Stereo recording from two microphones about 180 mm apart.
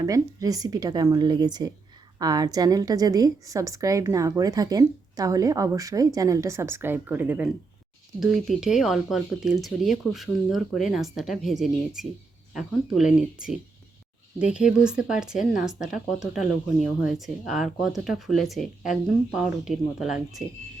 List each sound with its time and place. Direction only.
0.0 s a woman's voice: 20° right (ahead or behind); by 20.4 s centre (ahead or behind)